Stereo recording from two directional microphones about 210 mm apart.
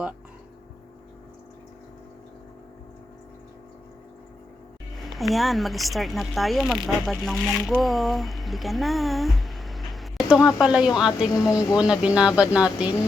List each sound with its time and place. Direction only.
5.1 s speech: centre (ahead or behind)